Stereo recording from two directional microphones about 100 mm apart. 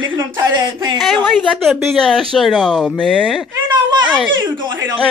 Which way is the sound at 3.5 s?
45° right (ahead or behind).